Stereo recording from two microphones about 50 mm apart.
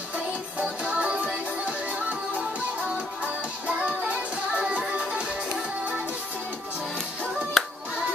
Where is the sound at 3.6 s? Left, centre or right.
Right.